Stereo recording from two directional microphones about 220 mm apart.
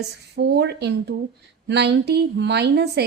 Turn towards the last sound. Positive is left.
turn(degrees=-50)  # may be behind; listen again after turning